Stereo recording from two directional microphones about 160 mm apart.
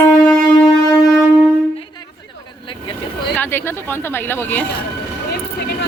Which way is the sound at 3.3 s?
15° left (ahead or behind).